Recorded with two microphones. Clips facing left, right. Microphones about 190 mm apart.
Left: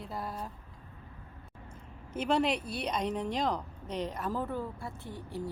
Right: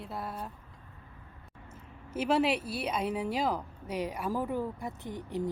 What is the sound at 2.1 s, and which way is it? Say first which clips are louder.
A woman's voice: right 1 dB; 5° right (ahead or behind).